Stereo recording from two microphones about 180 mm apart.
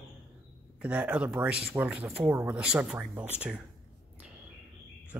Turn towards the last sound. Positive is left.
turn(degrees=-5)  # may be behind; listen again after turning